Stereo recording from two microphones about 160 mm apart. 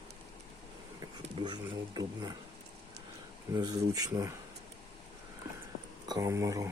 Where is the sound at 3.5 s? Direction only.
25° right (ahead or behind).